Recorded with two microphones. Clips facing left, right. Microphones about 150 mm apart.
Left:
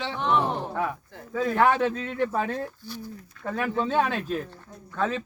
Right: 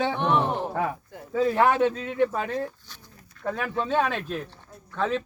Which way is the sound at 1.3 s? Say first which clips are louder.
Right 1 dB; 30° right (ahead or behind).